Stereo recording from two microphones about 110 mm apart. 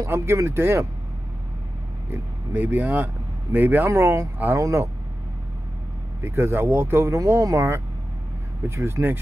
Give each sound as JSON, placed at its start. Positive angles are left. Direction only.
{"t": 0.0, "sound": "speech", "side_deg": -25}
{"t": 2.0, "sound": "speech", "side_deg": -15}
{"t": 6.2, "sound": "speech", "side_deg": -25}